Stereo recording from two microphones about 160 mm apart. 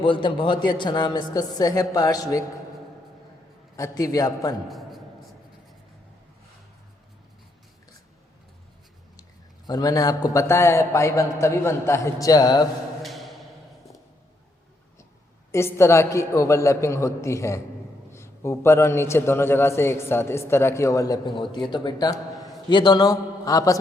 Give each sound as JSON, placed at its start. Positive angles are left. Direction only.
{"t": 0.0, "sound": "a man's voice", "side_deg": 30}
{"t": 3.8, "sound": "a man's voice", "side_deg": 20}
{"t": 4.7, "sound": "a sound", "side_deg": 0}
{"t": 9.6, "sound": "a man's voice", "side_deg": 25}
{"t": 13.0, "sound": "music", "side_deg": 0}
{"t": 15.5, "sound": "a man's voice", "side_deg": 15}